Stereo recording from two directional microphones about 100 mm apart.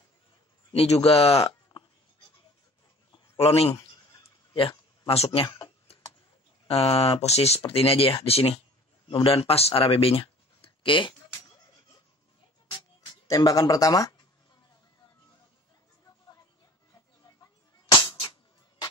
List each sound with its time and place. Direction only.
0.7 s speech: 85° left
3.3 s speech: 85° left
4.6 s speech: 65° left (ahead or behind); by 5.5 s 80° left
6.7 s speech: 80° left
9.1 s speech: 75° left (ahead or behind); by 11.1 s 55° left (ahead or behind)
12.6 s music: 45° left (ahead or behind)